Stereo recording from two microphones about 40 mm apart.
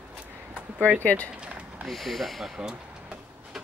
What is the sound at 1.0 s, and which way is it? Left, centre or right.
Speech, left.